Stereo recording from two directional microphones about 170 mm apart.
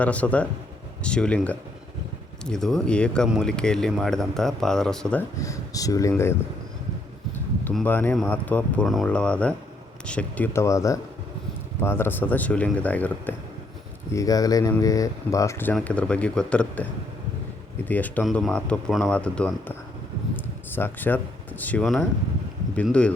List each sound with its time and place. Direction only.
0.0 s speech: 10° left (ahead or behind)
5.4 s speech: 20° left (ahead or behind)
7.3 s a sound: 5° left (ahead or behind)
8.1 s speech: 5° left (ahead or behind)
14.1 s speech: 20° left (ahead or behind)
20.3 s a sound: 10° left (ahead or behind)
22.7 s speech: 5° left (ahead or behind)